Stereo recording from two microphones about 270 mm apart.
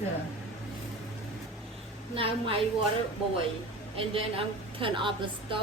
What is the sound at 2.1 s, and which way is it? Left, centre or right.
Speech, right.